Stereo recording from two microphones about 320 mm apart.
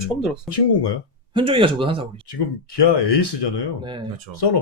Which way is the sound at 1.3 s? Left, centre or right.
Centre.